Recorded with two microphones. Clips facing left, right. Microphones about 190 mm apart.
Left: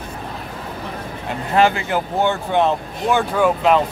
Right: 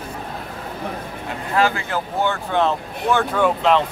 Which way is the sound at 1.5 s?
20° left (ahead or behind).